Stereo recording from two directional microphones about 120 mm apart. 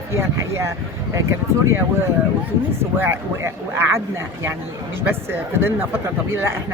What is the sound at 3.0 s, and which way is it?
Speech, 20° right (ahead or behind).